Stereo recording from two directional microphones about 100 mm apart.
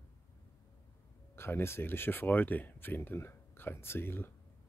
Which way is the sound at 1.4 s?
25° left (ahead or behind).